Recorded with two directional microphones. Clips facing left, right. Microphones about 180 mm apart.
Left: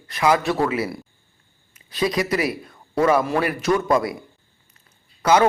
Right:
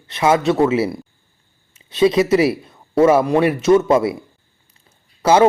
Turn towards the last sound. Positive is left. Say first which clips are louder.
# right 4 dB
turn(degrees=-30)  # may be behind; listen again after turning